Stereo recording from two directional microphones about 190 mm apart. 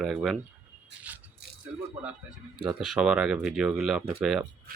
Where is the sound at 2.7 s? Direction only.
5° right (ahead or behind).